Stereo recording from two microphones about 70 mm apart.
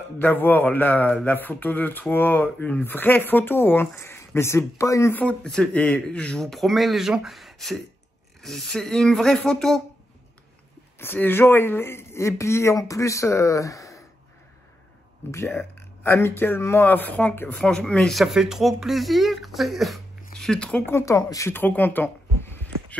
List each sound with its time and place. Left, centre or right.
0.2 s speech: left
5.4 s speech: centre
6.4 s speech: centre
11.0 s speech: left
15.3 s speech: left
17.6 s speech: centre
18.1 s speech: centre
21.0 s speech: left
21.5 s speech: left